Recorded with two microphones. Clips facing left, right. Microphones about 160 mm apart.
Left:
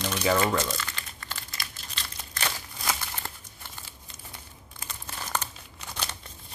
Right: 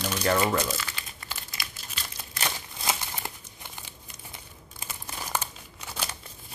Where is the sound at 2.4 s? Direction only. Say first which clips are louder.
Right 1 dB; 15° right (ahead or behind).